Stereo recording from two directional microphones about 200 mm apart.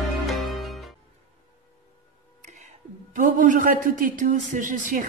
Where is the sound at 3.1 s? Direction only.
40° right (ahead or behind).